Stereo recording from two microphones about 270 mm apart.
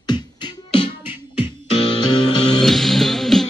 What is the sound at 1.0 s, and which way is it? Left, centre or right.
Music, centre.